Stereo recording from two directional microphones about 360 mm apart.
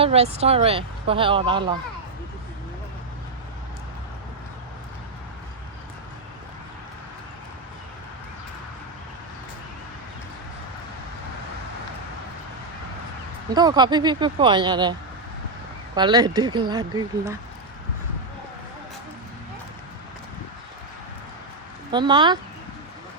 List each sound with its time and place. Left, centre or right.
0.0 s speech: centre
13.5 s speech: centre
16.0 s speech: centre
21.9 s speech: centre